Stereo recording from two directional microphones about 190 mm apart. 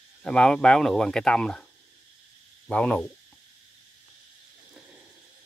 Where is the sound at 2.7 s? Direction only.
5° left (ahead or behind).